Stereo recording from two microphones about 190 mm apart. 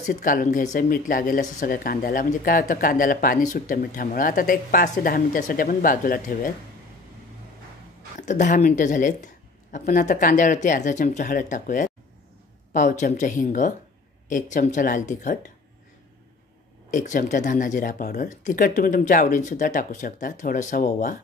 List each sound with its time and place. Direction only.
0.0 s speech: 45° left (ahead or behind)
8.2 s speech: 40° left (ahead or behind)
16.9 s speech: 40° left (ahead or behind)